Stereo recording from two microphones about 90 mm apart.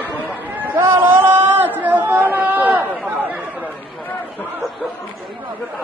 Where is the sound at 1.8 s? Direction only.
20° right (ahead or behind).